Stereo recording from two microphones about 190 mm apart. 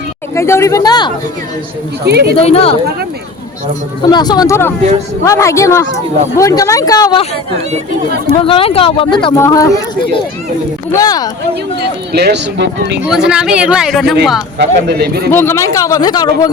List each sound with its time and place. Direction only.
0.3 s speech: 15° left (ahead or behind)
2.0 s speech: 60° right (ahead or behind)
2.4 s speech: 30° left (ahead or behind)
4.1 s speech: 20° left (ahead or behind)
8.4 s speech: 30° left (ahead or behind)
10.9 s speech: 20° left (ahead or behind)
12.1 s speech: 60° right (ahead or behind)
13.1 s speech: 5° right (ahead or behind)
14.6 s speech: 60° right (ahead or behind)
15.3 s speech: 10° left (ahead or behind)